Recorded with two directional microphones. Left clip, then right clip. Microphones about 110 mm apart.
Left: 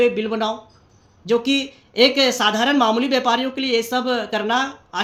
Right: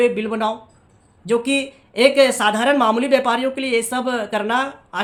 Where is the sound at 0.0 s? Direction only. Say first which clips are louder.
Even; 40° right (ahead or behind).